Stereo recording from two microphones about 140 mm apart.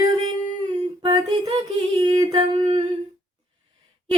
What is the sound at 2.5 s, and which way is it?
Humming, 45° right (ahead or behind).